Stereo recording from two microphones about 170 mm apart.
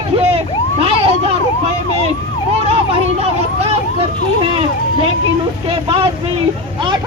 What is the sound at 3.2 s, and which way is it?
Speech, 35° right (ahead or behind).